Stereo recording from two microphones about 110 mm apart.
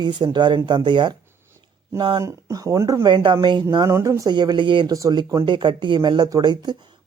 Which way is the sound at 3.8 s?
25° right (ahead or behind).